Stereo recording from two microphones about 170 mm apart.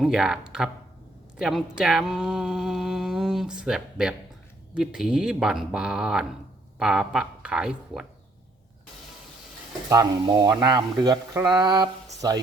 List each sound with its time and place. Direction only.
0.0 s speech: 5° right (ahead or behind)
9.9 s speech: 20° right (ahead or behind)